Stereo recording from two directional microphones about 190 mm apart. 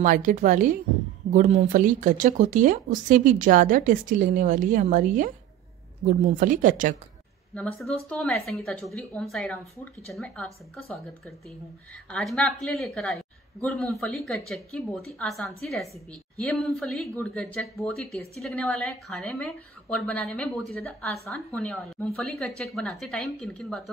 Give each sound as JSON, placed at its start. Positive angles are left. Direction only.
{"t": 0.0, "sound": "speech", "side_deg": -45}
{"t": 7.5, "sound": "a woman's voice", "side_deg": 5}